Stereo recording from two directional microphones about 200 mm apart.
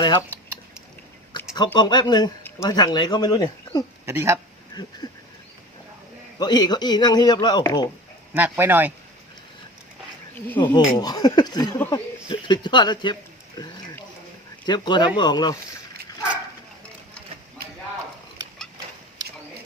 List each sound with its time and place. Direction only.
0.0 s speech: 20° left (ahead or behind)
1.5 s speech: 20° left (ahead or behind)
4.0 s speech: 10° right (ahead or behind)
4.7 s a sound: 20° left (ahead or behind)
6.4 s speech: 20° left (ahead or behind)
8.3 s speech: 10° right (ahead or behind)
10.8 s speech: 20° left (ahead or behind)